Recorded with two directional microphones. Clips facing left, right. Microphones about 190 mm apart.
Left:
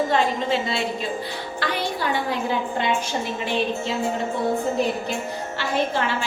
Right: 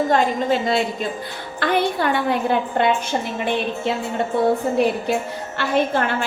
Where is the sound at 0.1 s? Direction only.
45° right (ahead or behind).